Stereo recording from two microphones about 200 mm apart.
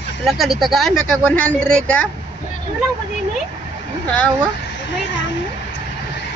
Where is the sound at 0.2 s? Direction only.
Centre (ahead or behind).